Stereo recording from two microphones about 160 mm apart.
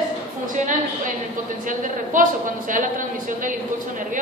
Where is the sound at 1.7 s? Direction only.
55° right (ahead or behind).